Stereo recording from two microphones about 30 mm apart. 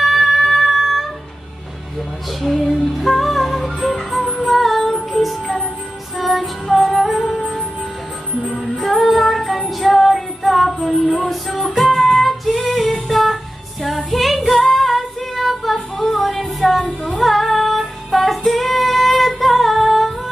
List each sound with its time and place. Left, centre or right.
0.0 s music: centre
8.5 s music: centre
12.0 s female singing: centre